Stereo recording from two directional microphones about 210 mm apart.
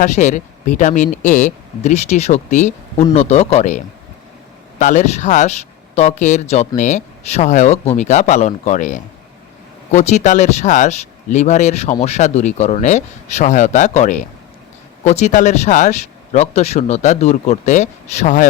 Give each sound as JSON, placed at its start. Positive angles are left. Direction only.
{"t": 0.0, "sound": "speech", "side_deg": 35}
{"t": 4.8, "sound": "speech", "side_deg": 35}